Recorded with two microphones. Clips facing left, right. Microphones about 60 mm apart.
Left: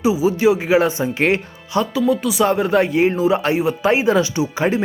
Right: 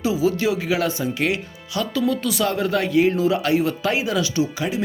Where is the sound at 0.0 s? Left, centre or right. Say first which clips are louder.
Left 5 dB; centre.